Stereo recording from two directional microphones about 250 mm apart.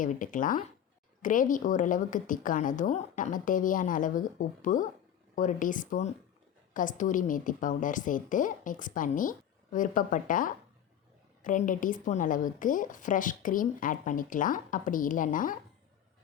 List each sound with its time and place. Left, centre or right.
0.0 s a woman's voice: left